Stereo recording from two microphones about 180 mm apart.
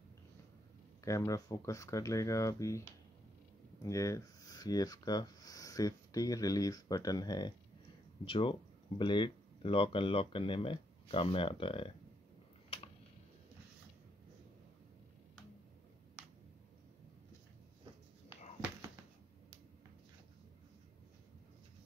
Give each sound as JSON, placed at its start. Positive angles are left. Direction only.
{"t": 1.0, "sound": "speech", "side_deg": 20}
{"t": 3.8, "sound": "speech", "side_deg": 15}
{"t": 12.6, "sound": "a sound", "side_deg": 30}